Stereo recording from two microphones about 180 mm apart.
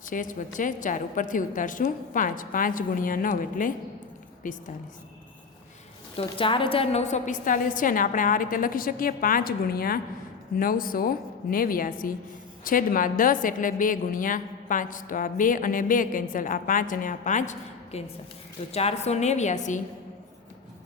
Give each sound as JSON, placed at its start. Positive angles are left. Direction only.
{"t": 0.1, "sound": "a woman's voice", "side_deg": 45}
{"t": 6.1, "sound": "a woman's voice", "side_deg": 30}